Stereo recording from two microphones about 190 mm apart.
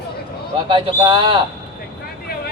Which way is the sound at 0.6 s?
25° right (ahead or behind).